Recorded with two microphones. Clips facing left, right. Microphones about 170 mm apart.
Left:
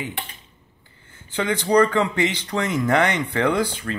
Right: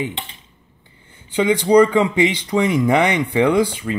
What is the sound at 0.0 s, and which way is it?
Speech, 20° right (ahead or behind).